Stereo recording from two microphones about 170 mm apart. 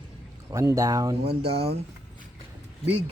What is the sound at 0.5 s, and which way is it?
Speech, 20° right (ahead or behind).